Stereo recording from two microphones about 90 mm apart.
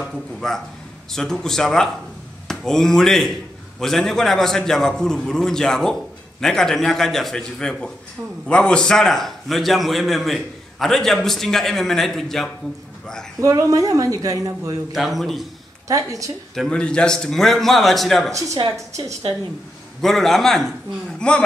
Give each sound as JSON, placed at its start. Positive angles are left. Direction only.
{"t": 0.0, "sound": "a man's voice", "side_deg": 5}
{"t": 13.4, "sound": "speech", "side_deg": -40}
{"t": 15.0, "sound": "a man's voice", "side_deg": 0}
{"t": 15.9, "sound": "speech", "side_deg": -40}
{"t": 16.5, "sound": "a man's voice", "side_deg": 10}
{"t": 20.0, "sound": "a man's voice", "side_deg": 5}